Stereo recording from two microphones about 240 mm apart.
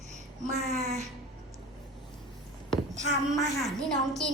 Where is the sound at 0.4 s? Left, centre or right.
Right.